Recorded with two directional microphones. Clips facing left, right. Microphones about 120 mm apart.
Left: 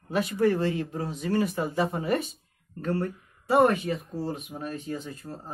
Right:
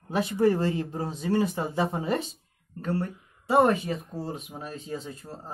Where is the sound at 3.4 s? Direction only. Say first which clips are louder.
Even; 25° right (ahead or behind).